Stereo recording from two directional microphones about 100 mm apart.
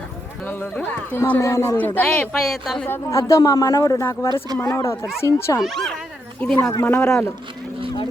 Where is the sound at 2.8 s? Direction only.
25° left (ahead or behind).